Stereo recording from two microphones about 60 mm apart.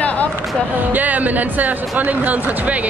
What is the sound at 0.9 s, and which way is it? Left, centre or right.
Speech, right.